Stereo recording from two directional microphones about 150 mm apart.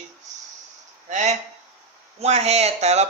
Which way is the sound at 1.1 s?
50° right (ahead or behind).